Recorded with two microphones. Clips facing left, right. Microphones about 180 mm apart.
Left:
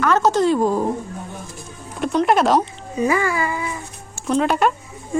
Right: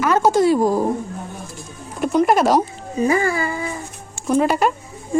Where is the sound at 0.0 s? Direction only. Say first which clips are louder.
Right 1 dB; 10° right (ahead or behind).